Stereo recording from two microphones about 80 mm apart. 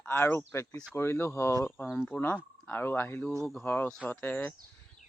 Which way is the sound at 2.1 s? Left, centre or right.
Centre.